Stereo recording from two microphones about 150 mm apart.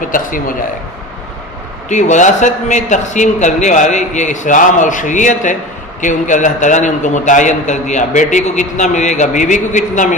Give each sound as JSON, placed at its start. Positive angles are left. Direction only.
{"t": 0.1, "sound": "a man's voice", "side_deg": 65}
{"t": 1.9, "sound": "a man's voice", "side_deg": 55}